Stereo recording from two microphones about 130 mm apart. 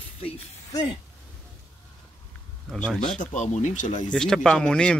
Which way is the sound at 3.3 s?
65° left (ahead or behind).